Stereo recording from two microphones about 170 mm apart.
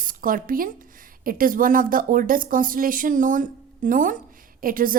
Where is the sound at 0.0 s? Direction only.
55° right (ahead or behind).